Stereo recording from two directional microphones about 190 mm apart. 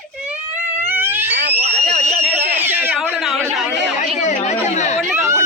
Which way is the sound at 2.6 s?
10° right (ahead or behind).